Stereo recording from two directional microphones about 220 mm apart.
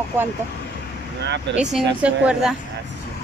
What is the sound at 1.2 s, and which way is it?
Speech, 50° right (ahead or behind).